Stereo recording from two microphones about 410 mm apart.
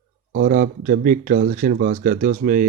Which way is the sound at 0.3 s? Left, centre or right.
Right.